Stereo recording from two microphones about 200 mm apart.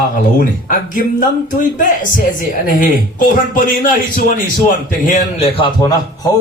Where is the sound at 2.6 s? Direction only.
45° left (ahead or behind).